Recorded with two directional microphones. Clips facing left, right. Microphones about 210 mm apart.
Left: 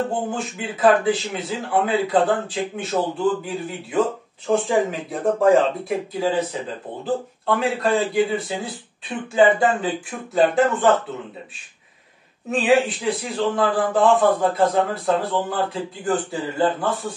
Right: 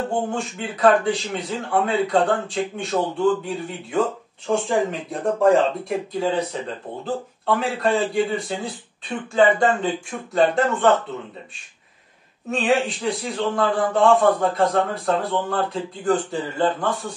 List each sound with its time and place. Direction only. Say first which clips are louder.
0.3 s a man's voice: even; centre (ahead or behind)
12.4 s a man's voice: left 3 dB; centre (ahead or behind)